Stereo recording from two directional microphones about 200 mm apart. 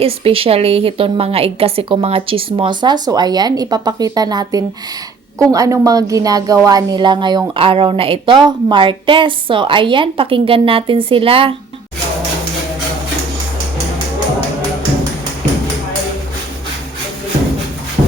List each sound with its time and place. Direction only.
0.0 s a woman's voice: 30° right (ahead or behind)